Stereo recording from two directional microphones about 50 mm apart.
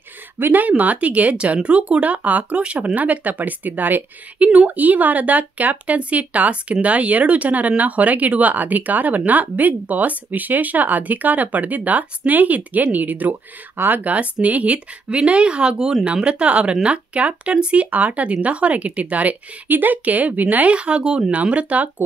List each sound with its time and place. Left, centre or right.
0.4 s speech: right